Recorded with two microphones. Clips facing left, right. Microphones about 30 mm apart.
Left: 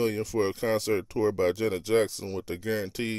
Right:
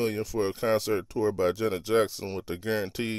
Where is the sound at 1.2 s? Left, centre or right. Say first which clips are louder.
Even; centre.